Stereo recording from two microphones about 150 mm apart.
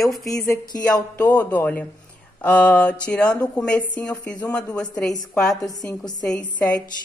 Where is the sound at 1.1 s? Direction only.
10° left (ahead or behind).